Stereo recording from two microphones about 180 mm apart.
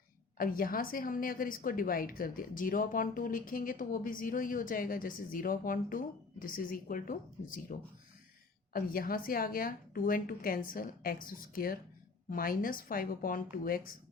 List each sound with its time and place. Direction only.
0.3 s a woman's voice: 50° left (ahead or behind)